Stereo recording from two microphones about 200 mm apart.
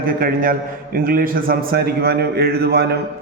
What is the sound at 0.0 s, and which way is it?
A man's voice, 45° right (ahead or behind).